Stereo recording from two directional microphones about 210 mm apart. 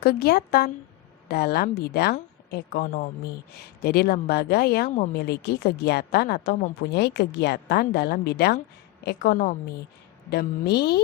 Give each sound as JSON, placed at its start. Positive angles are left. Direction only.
{"t": 0.0, "sound": "a woman's voice", "side_deg": 50}